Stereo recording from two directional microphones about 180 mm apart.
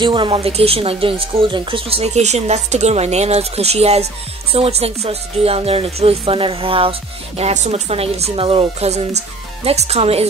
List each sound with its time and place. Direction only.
0.0 s a woman's voice: 30° right (ahead or behind)